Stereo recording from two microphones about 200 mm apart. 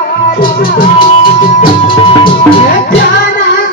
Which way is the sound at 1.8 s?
25° left (ahead or behind).